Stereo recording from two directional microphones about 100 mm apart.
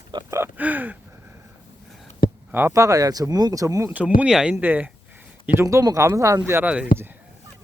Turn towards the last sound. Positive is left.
turn(degrees=-25)  # may be behind; listen again after turning